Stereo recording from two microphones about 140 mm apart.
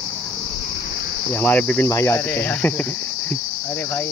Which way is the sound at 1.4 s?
15° left (ahead or behind).